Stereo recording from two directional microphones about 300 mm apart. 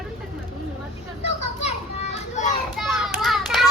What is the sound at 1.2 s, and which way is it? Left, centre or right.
Children playing, left.